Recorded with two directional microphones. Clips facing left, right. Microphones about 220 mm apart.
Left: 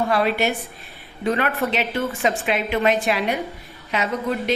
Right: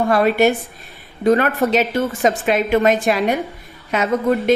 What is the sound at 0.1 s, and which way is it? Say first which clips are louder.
A woman's voice: right 6 dB; 50° right (ahead or behind).